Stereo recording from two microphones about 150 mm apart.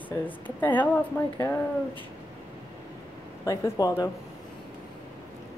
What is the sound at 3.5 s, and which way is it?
Speech, 25° left (ahead or behind).